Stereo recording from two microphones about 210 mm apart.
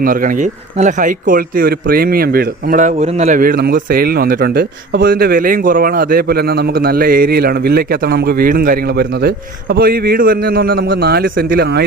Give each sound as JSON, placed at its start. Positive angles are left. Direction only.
{"t": 0.0, "sound": "speech", "side_deg": -40}